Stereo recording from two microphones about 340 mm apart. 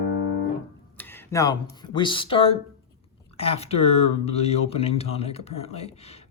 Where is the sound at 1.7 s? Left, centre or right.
Centre.